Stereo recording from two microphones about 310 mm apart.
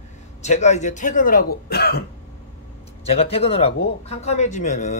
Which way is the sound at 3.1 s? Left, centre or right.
Centre.